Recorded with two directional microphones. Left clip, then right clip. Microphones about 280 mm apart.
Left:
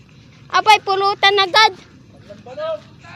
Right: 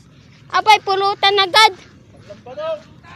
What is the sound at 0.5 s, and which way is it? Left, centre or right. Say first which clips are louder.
Speech: even; centre.